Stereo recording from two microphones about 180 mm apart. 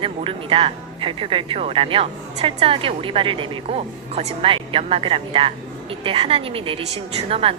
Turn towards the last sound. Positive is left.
turn(degrees=-30)  # may be behind; listen again after turning